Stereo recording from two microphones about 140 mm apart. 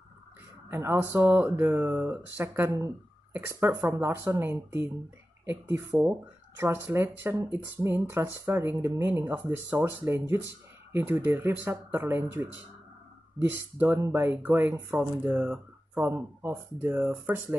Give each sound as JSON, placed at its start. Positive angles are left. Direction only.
{"t": 0.7, "sound": "speech", "side_deg": -15}